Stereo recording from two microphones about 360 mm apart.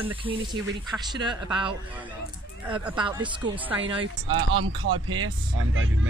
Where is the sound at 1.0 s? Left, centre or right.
Centre.